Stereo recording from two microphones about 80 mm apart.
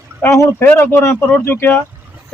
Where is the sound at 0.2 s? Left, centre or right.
Left.